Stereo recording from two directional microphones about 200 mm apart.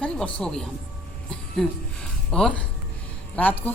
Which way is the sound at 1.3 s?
Centre (ahead or behind).